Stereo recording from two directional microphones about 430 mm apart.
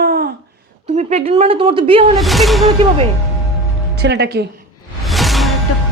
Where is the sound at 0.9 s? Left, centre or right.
Centre.